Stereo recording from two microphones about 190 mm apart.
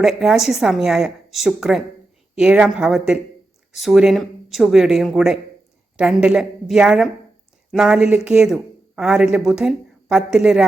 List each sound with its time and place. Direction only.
0.0 s a woman's voice: centre (ahead or behind)